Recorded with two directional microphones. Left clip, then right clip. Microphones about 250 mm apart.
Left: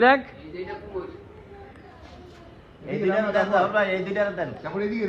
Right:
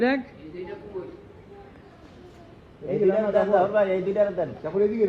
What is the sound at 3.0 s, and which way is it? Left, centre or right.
A man's voice, left.